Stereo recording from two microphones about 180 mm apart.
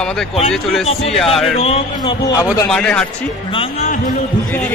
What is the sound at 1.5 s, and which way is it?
Speech, 35° left (ahead or behind).